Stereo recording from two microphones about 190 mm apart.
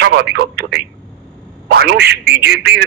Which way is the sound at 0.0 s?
60° right (ahead or behind).